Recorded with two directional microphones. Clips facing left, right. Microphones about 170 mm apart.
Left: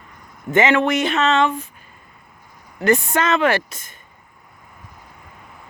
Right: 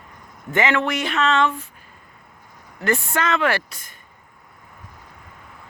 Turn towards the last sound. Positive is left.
turn(degrees=20)  # may be behind; listen again after turning